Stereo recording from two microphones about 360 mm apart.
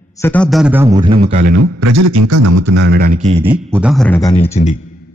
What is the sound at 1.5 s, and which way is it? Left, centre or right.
A man's voice, right.